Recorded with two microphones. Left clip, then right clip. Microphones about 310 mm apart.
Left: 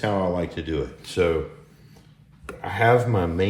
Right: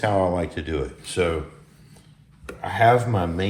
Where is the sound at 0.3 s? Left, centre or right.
Centre.